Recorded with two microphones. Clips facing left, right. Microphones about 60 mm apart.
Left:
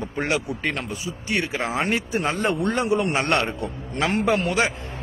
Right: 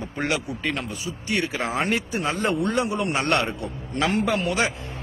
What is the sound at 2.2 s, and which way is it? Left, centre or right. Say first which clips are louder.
A man's voice: left 2 dB; left.